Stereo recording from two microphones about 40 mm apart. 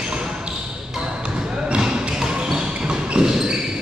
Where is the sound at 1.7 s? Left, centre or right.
Centre.